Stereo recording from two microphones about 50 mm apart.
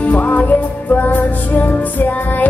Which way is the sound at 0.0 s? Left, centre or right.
Left.